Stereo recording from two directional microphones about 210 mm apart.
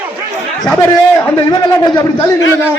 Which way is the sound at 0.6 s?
5° left (ahead or behind).